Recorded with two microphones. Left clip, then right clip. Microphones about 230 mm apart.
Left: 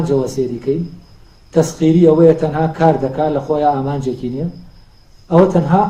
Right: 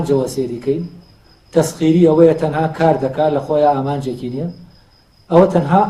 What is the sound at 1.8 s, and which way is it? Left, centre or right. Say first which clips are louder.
A man's voice: left 1 dB; right.